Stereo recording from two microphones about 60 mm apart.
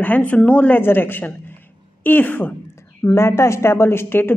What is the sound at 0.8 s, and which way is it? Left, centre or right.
A woman's voice, left.